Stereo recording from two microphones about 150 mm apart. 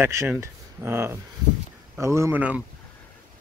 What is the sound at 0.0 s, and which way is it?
Speech, 15° right (ahead or behind).